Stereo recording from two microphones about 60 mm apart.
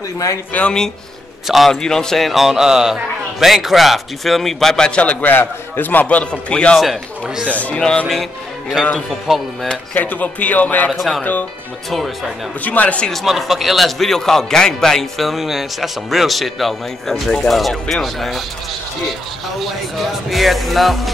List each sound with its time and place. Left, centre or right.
0.5 s speech: left
1.7 s a man's voice: centre
5.3 s speech: left; by 6.8 s centre
6.8 s speech: centre
7.4 s speech: left
8.9 s a man's voice: centre
9.7 s speech: left
10.9 s a man's voice: centre
12.6 s speech: left
13.1 s a man's voice: centre
19.6 s a man's voice: centre